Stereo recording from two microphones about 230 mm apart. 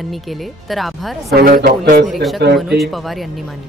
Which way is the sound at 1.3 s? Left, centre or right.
Right.